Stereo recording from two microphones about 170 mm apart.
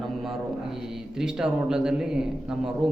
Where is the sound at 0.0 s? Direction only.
Centre (ahead or behind).